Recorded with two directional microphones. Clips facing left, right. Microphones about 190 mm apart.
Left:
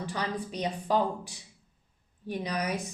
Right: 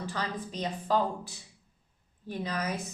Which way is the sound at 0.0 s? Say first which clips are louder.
Left 2 dB; 15° left (ahead or behind).